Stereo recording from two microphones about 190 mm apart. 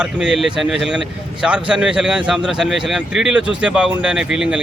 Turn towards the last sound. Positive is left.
turn(degrees=-5)  # may be behind; listen again after turning